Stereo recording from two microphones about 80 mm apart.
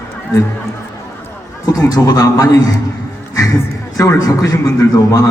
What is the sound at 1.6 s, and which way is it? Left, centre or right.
A man's voice, left.